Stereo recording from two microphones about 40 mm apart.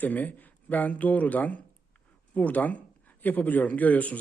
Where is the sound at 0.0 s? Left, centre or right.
Left.